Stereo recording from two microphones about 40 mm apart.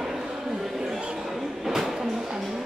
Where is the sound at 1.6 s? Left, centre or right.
Centre.